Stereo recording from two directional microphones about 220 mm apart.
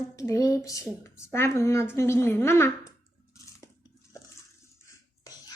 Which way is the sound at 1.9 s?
10° left (ahead or behind).